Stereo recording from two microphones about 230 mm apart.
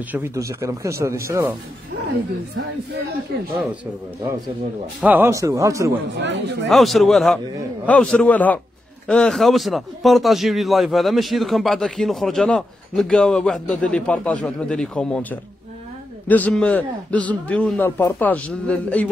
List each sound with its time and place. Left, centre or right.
0.1 s speech: centre
5.0 s speech: centre
6.1 s speech: right
6.7 s a man's voice: centre